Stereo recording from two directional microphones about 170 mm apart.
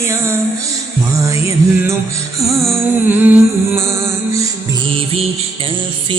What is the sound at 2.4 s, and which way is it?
Music, 20° right (ahead or behind).